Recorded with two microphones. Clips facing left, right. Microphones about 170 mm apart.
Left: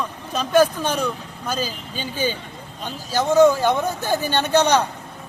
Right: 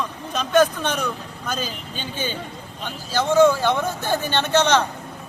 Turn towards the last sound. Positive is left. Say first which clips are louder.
# left 1 dB
turn(degrees=15)  # may be behind; listen again after turning